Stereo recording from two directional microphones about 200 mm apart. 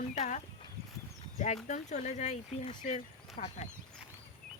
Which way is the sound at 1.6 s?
35° left (ahead or behind).